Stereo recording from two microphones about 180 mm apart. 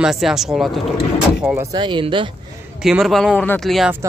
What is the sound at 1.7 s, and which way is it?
Speech, 25° right (ahead or behind).